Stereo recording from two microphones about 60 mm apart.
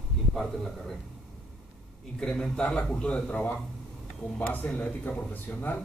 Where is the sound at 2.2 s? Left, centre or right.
Centre; by 5.7 s left.